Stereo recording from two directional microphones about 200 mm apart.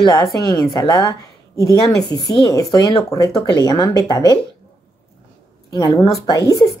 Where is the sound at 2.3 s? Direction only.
20° left (ahead or behind).